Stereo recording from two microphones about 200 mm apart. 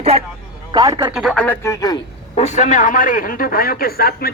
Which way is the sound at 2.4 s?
35° left (ahead or behind).